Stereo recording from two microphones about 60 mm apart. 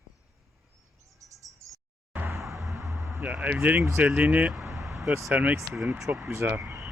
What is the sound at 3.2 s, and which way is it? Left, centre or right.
Speech, right.